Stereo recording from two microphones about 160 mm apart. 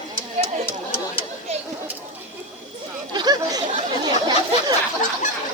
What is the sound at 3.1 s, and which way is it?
Chatter, 25° right (ahead or behind).